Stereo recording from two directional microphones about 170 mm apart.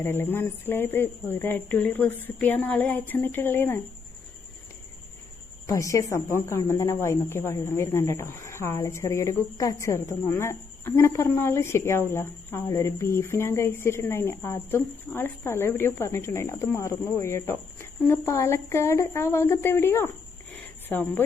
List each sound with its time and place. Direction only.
0.0 s a woman's voice: 10° left (ahead or behind)
5.6 s a woman's voice: 20° left (ahead or behind)
20.5 s a sound: 10° left (ahead or behind)